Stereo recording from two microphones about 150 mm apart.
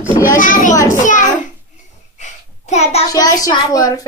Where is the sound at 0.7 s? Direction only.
20° left (ahead or behind).